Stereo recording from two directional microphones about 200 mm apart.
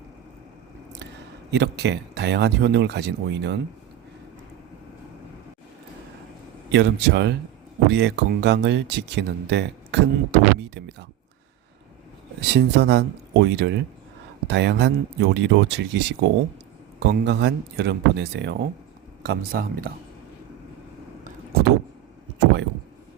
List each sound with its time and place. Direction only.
1.5 s speech: 60° right (ahead or behind)
6.7 s speech: 60° right (ahead or behind)
12.4 s speech: 55° right (ahead or behind)